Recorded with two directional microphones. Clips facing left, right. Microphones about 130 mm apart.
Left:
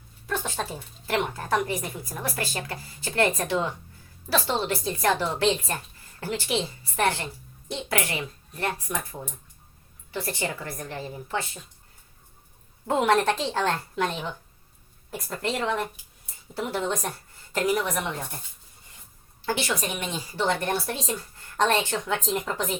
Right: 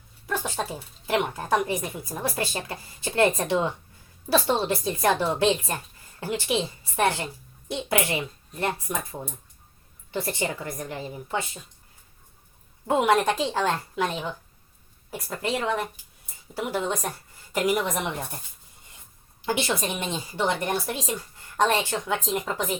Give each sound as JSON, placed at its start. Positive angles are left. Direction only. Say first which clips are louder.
{"t": 0.3, "sound": "a sound", "louder": "right 1 dB", "side_deg": -10}
{"t": 1.0, "sound": "speech", "louder": "right 2 dB", "side_deg": -15}
{"t": 10.1, "sound": "speech", "louder": "right 2 dB", "side_deg": -25}
{"t": 12.9, "sound": "speech", "louder": "right 1 dB", "side_deg": -10}
{"t": 19.5, "sound": "speech", "louder": "right 1 dB", "side_deg": -25}